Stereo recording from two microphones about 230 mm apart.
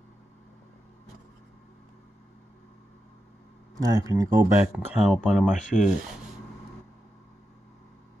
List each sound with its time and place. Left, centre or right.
3.7 s speech: centre
4.7 s speech: centre